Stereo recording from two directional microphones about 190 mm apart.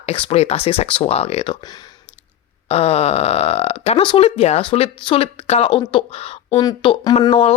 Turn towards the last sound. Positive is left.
turn(degrees=30)  # may be behind; listen again after turning